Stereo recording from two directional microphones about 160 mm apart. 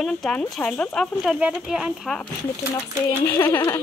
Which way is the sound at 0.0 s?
5° left (ahead or behind).